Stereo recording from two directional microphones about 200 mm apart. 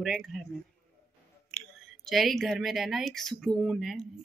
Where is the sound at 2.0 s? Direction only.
Centre (ahead or behind).